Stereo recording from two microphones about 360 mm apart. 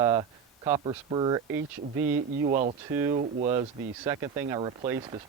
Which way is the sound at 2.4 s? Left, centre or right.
Right.